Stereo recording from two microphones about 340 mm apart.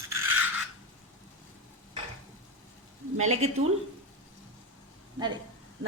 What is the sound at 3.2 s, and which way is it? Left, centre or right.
Speech, centre.